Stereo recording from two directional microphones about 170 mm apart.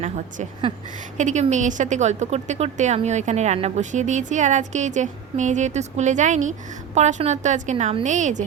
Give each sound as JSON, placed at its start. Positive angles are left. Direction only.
{"t": 0.0, "sound": "a woman's voice", "side_deg": -40}